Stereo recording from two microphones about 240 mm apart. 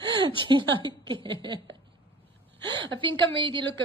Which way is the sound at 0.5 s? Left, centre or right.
Centre.